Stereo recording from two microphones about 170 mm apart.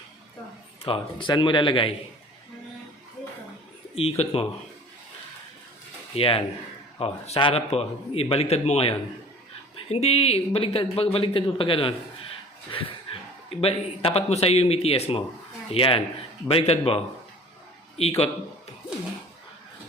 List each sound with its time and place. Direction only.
0.9 s speech: 30° left (ahead or behind)
3.9 s a man's voice: 35° left (ahead or behind)
6.1 s a man's voice: 35° left (ahead or behind)
13.1 s a sound: 30° left (ahead or behind)
13.6 s a man's voice: 35° left (ahead or behind)
18.0 s a man's voice: 35° left (ahead or behind)